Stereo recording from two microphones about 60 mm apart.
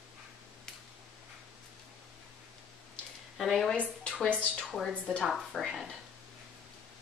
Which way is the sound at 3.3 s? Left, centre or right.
Centre.